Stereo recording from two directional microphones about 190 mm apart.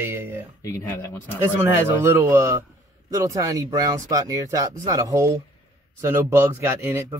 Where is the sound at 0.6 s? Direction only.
15° left (ahead or behind).